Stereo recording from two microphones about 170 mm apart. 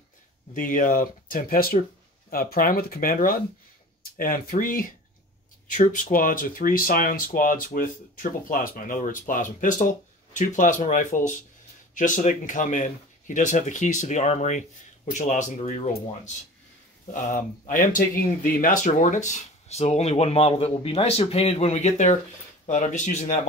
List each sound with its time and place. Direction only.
0.6 s speech: 50° left (ahead or behind)
17.1 s speech: 50° left (ahead or behind)